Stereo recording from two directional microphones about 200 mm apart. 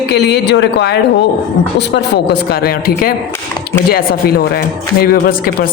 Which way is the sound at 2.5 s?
45° left (ahead or behind).